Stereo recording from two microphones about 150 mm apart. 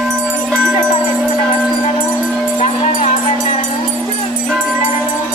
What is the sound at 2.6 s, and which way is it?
Music, 45° left (ahead or behind).